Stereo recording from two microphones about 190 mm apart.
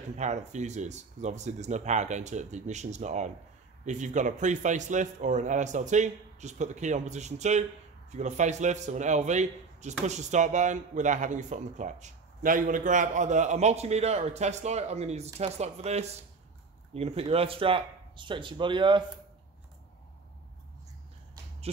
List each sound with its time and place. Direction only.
0.2 s a man's voice: 40° right (ahead or behind)